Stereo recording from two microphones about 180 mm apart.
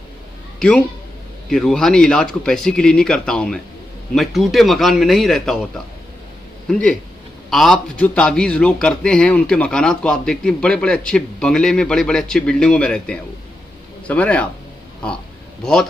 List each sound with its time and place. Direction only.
0.6 s a man's voice: 5° left (ahead or behind)
6.7 s a man's voice: 5° left (ahead or behind)
15.6 s a man's voice: 5° left (ahead or behind)